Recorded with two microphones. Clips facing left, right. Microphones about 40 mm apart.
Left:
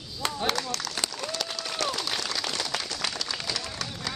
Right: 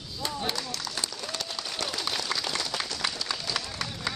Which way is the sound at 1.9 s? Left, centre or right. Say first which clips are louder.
Left 1 dB; centre.